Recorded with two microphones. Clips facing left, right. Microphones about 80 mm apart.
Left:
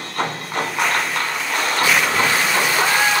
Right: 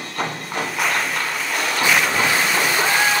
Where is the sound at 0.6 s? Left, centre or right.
Centre.